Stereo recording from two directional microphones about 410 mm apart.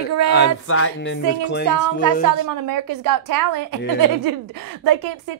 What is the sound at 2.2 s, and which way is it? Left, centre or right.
A woman's voice, right.